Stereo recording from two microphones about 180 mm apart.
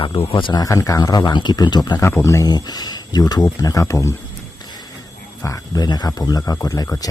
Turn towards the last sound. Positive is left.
turn(degrees=20)  # may be behind; listen again after turning